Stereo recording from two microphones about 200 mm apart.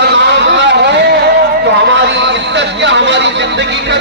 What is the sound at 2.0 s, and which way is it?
Speech, 60° right (ahead or behind).